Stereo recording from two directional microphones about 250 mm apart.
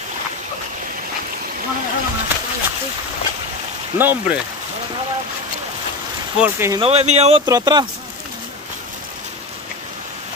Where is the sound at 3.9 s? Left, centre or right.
Centre.